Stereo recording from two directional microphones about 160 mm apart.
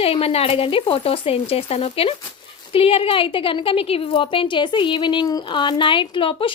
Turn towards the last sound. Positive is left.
turn(degrees=35)  # may be behind; listen again after turning